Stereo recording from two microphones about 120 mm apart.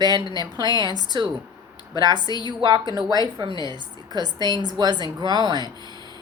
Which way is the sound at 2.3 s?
35° left (ahead or behind).